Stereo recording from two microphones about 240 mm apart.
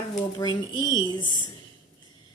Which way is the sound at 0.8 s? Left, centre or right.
Centre.